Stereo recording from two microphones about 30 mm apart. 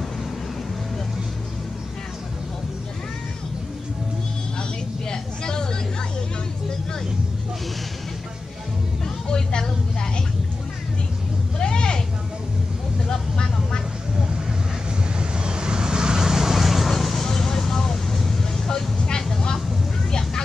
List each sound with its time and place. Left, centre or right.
5.1 s vehicle: left
9.3 s music: left
11.5 s vehicle: left
13.1 s vehicle: left
15.1 s vehicle: right
16.5 s vehicle: centre
16.9 s vehicle: centre; by 20.4 s left